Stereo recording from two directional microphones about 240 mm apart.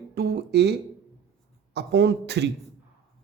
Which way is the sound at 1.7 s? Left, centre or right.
Right.